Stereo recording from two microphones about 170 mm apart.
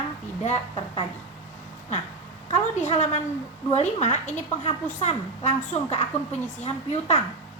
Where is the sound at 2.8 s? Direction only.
45° left (ahead or behind).